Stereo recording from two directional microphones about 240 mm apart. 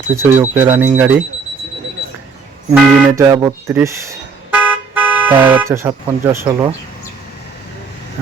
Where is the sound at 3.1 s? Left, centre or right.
Centre.